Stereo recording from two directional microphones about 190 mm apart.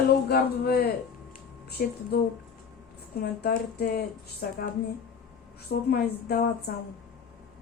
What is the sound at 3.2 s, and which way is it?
Speech, 55° left (ahead or behind).